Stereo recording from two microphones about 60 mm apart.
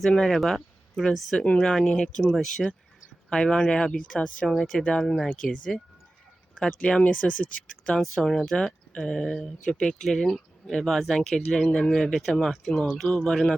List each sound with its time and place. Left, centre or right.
0.2 s speech: centre
1.4 s speech: centre
4.8 s speech: centre
6.6 s speech: centre
8.0 s speech: centre